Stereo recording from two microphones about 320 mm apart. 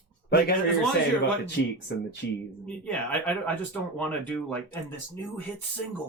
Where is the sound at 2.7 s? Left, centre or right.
Centre.